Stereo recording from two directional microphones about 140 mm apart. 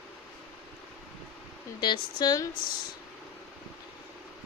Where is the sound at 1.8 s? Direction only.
30° left (ahead or behind).